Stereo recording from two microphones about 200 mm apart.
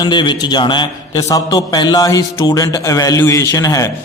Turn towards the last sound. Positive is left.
turn(degrees=15)  # may be behind; listen again after turning